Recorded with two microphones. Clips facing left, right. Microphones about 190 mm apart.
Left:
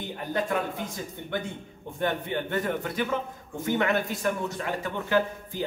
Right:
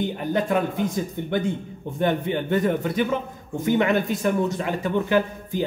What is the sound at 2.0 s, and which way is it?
Speech, 20° right (ahead or behind).